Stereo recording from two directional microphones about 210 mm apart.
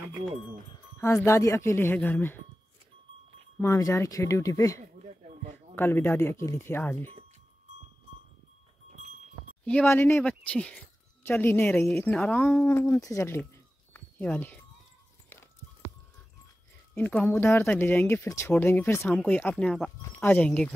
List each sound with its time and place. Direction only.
1.0 s speech: 15° left (ahead or behind)
3.5 s speech: 15° left (ahead or behind)
4.9 s a sound: 35° right (ahead or behind)
5.8 s speech: 10° left (ahead or behind)
9.7 s speech: 10° left (ahead or behind)
13.9 s a sound: 5° left (ahead or behind)
15.2 s horse: 10° left (ahead or behind)
16.9 s speech: 5° left (ahead or behind)